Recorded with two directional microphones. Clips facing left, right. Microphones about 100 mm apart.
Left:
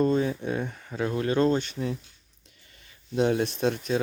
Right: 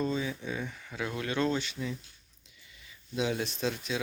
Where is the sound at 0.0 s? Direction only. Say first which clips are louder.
Left 8 dB; 55° left (ahead or behind).